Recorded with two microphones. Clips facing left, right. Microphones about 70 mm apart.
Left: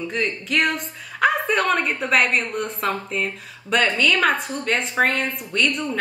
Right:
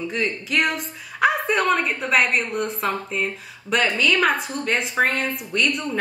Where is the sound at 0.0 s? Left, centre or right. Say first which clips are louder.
Even; centre.